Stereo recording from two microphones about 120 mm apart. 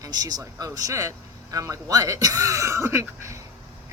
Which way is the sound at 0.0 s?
30° right (ahead or behind).